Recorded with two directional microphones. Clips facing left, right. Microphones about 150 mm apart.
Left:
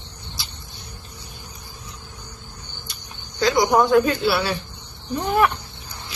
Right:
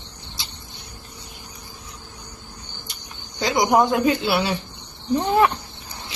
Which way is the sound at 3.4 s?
20° right (ahead or behind).